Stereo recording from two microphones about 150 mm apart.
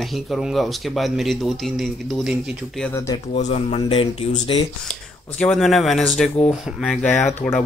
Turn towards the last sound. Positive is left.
turn(degrees=15)  # may be behind; listen again after turning